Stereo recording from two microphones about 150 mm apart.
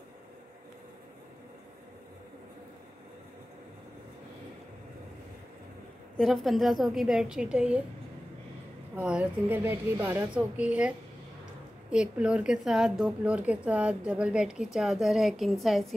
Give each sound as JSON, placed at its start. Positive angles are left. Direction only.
{"t": 6.1, "sound": "speech", "side_deg": 0}
{"t": 8.9, "sound": "a woman's voice", "side_deg": -10}